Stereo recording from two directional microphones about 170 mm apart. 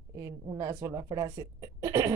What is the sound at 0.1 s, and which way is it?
Speech, 20° right (ahead or behind).